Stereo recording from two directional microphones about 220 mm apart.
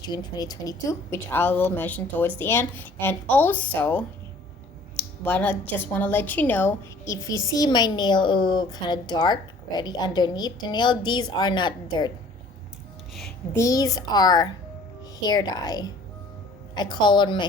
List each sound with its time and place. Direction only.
0.0 s a woman's voice: 20° left (ahead or behind)
13.1 s a sound: centre (ahead or behind)
13.6 s a woman's voice: 15° left (ahead or behind)